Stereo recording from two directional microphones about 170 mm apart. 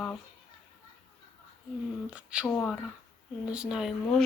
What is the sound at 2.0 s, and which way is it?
Speech, 5° right (ahead or behind).